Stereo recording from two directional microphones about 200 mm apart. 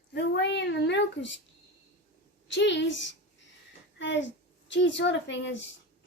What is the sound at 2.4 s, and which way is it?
A woman's voice, 65° left (ahead or behind).